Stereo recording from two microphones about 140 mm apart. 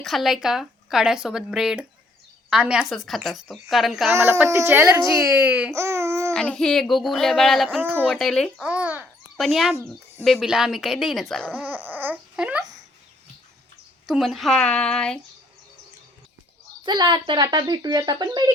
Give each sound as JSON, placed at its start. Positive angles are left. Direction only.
{"t": 0.0, "sound": "speech", "side_deg": 0}
{"t": 4.1, "sound": "speech", "side_deg": -20}
{"t": 5.3, "sound": "speech", "side_deg": -10}
{"t": 5.7, "sound": "babbling", "side_deg": -20}
{"t": 6.3, "sound": "speech", "side_deg": 5}
{"t": 7.7, "sound": "speech", "side_deg": -15}
{"t": 8.0, "sound": "speech", "side_deg": 5}
{"t": 8.6, "sound": "babbling", "side_deg": -10}
{"t": 9.4, "sound": "speech", "side_deg": 0}
{"t": 11.5, "sound": "a sound", "side_deg": -10}
{"t": 14.1, "sound": "speech", "side_deg": 0}
{"t": 16.8, "sound": "speech", "side_deg": -30}